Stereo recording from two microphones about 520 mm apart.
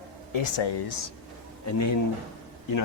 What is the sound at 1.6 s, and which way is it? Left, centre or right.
Speech, left.